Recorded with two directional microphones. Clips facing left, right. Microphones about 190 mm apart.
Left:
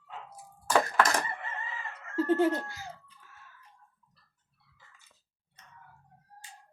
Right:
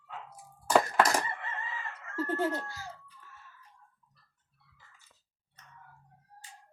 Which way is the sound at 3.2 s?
Centre (ahead or behind).